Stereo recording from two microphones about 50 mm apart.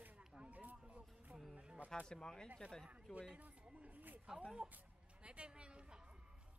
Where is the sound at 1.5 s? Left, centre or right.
Right.